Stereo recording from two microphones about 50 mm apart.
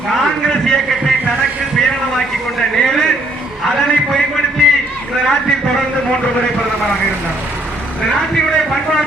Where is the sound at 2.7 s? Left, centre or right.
Centre.